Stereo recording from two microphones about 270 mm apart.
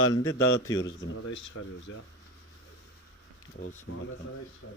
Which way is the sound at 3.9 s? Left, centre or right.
Left.